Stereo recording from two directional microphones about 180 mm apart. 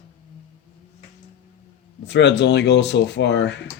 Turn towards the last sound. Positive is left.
turn(degrees=75)  # may be behind; listen again after turning